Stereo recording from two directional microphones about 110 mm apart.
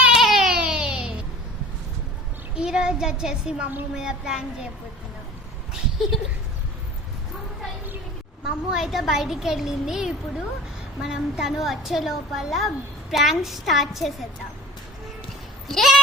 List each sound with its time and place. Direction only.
0.0 s baby cry: 5° right (ahead or behind)
2.6 s a woman's voice: 5° right (ahead or behind)
8.4 s a woman's voice: 5° right (ahead or behind)
15.6 s a woman's voice: centre (ahead or behind)